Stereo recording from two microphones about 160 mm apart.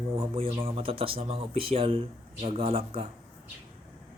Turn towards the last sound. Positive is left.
turn(degrees=-35)  # may be behind; listen again after turning